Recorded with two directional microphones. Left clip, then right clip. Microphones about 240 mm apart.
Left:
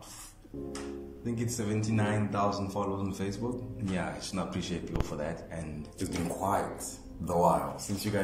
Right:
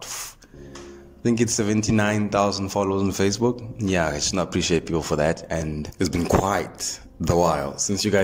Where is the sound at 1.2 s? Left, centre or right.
Right.